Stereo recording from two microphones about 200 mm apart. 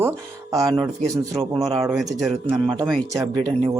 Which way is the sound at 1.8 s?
5° right (ahead or behind).